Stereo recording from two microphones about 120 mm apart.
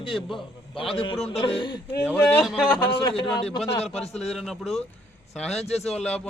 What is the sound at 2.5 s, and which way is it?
Speech, 5° left (ahead or behind).